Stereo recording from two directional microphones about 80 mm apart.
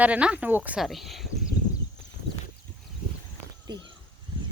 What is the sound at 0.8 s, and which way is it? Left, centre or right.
Speech, centre.